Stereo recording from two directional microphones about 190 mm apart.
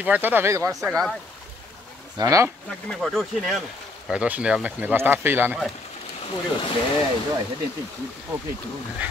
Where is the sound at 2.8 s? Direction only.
Centre (ahead or behind).